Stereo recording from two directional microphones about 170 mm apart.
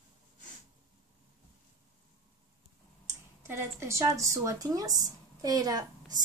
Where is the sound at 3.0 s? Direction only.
15° right (ahead or behind).